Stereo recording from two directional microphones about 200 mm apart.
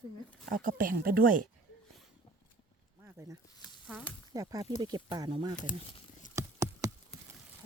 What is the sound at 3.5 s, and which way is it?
Sizzle, 20° left (ahead or behind).